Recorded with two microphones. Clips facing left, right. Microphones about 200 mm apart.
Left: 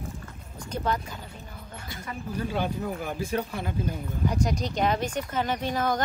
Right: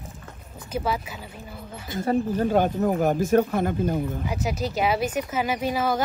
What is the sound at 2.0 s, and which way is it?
Speech, 45° right (ahead or behind).